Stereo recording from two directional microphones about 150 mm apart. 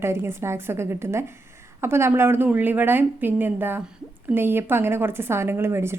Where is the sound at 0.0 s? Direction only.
15° right (ahead or behind).